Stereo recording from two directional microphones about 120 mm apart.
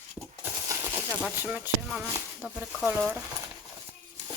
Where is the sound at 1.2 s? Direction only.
10° right (ahead or behind).